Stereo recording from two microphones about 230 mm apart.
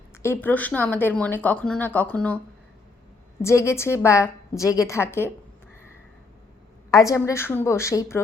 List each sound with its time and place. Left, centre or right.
0.1 s speech: centre
3.4 s speech: centre
6.9 s speech: centre